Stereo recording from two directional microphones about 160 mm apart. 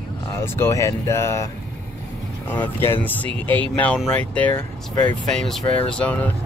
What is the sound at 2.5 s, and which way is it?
Speech, 15° left (ahead or behind).